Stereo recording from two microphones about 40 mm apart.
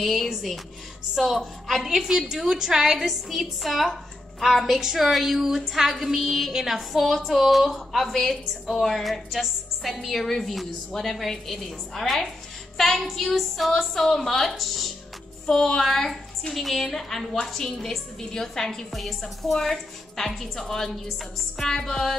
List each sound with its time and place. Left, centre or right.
0.0 s a woman's voice: centre
15.4 s a woman's voice: centre